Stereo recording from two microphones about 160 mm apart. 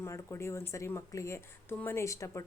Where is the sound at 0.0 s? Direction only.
15° left (ahead or behind).